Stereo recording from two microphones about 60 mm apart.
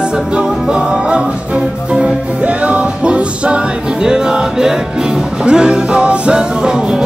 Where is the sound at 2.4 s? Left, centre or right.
Right.